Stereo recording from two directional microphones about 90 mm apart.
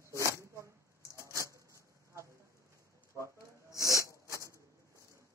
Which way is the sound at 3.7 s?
35° left (ahead or behind).